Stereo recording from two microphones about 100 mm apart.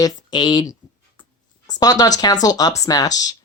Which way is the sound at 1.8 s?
40° left (ahead or behind).